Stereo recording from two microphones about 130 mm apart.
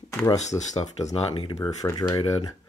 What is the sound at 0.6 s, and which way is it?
Speech, 60° left (ahead or behind).